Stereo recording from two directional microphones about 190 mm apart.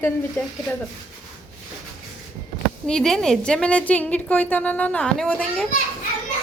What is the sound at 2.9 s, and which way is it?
A woman's voice, 5° left (ahead or behind).